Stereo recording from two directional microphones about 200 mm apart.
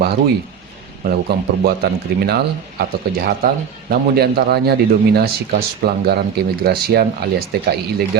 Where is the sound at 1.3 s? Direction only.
50° right (ahead or behind).